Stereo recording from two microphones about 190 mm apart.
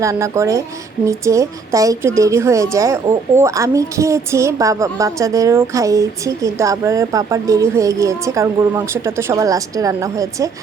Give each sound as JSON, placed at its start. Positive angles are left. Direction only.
{"t": 0.0, "sound": "a woman's voice", "side_deg": -15}